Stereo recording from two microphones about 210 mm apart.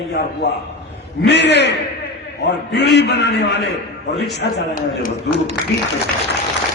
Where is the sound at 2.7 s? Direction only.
55° left (ahead or behind).